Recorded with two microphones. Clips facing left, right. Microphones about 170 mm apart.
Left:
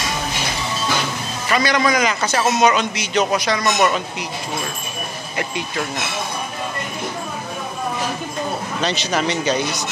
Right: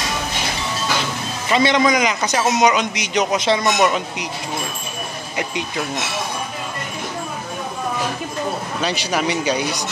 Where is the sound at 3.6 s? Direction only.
10° right (ahead or behind).